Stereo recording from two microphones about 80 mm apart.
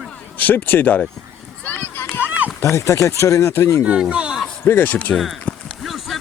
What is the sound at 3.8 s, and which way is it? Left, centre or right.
Speech, centre.